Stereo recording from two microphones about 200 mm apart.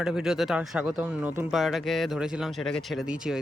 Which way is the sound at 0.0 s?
5° right (ahead or behind).